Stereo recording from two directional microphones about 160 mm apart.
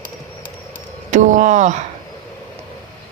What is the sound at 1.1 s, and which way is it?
Speech, 50° right (ahead or behind).